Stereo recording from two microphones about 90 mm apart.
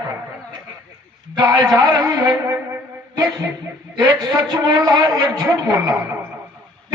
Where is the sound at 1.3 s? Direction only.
50° right (ahead or behind).